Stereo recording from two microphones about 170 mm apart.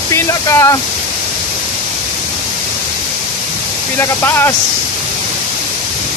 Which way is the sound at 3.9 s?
15° left (ahead or behind).